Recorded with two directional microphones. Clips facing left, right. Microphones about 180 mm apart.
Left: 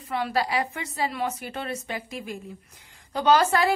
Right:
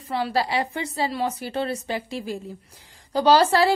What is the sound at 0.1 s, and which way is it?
A woman's voice, 30° right (ahead or behind).